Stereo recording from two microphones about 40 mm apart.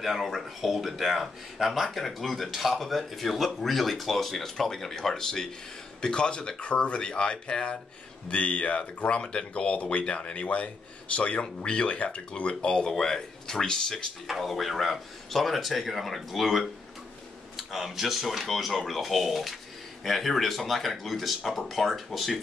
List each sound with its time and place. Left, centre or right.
0.0 s speech: centre; by 12.7 s left
12.7 s speech: centre
14.2 s speech: centre